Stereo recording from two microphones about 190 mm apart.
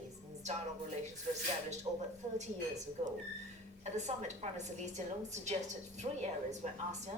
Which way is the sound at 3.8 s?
35° right (ahead or behind).